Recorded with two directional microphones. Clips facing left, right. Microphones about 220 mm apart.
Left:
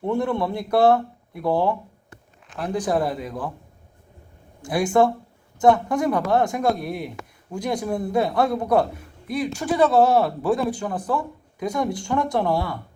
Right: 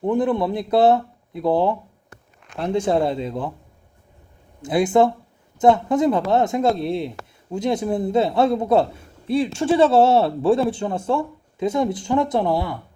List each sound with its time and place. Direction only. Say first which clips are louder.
0.0 s a man's voice: right 3 dB; 20° right (ahead or behind)
4.6 s a man's voice: right 2 dB; 20° right (ahead or behind)